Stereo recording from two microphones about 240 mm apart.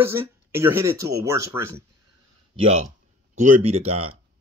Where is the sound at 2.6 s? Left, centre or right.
Right.